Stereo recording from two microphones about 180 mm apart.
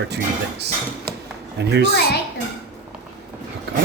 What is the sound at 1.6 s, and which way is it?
Speech, 70° right (ahead or behind).